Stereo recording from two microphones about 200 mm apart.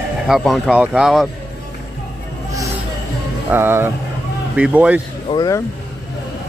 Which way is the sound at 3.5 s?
10° right (ahead or behind).